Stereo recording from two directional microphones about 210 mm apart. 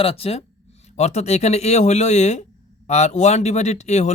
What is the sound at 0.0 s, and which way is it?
Speech, 30° left (ahead or behind).